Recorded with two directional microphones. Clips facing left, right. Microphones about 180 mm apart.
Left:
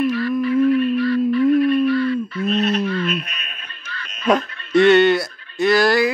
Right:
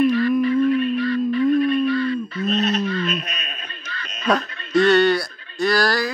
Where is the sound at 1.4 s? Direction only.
5° left (ahead or behind).